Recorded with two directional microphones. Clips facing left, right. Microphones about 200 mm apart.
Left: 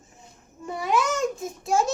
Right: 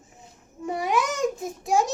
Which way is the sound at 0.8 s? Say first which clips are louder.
Left 1 dB; 15° right (ahead or behind).